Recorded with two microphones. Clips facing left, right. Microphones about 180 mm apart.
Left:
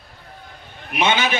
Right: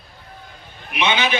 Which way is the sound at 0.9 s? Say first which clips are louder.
Left 1 dB; 45° left (ahead or behind).